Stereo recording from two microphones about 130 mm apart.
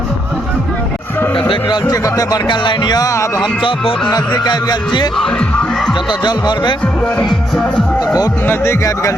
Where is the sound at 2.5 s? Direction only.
35° left (ahead or behind).